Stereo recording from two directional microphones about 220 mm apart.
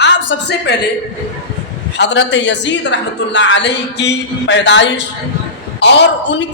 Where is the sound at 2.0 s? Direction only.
55° left (ahead or behind).